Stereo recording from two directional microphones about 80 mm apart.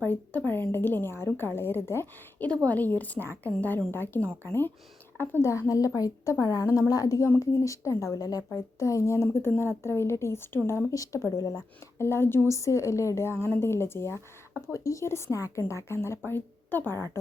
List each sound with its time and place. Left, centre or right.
0.0 s a woman's voice: left
5.1 s speech: right
5.4 s a woman's voice: left
10.9 s speech: left
11.9 s a woman's voice: left